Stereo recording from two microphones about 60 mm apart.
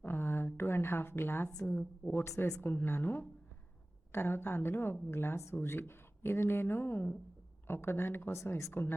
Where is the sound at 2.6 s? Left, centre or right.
Left.